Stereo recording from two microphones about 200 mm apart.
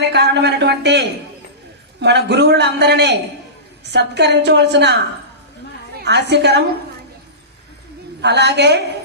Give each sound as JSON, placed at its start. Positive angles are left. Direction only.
{"t": 0.1, "sound": "a man's voice", "side_deg": -55}
{"t": 6.0, "sound": "a man's voice", "side_deg": -55}
{"t": 8.2, "sound": "a man's voice", "side_deg": -60}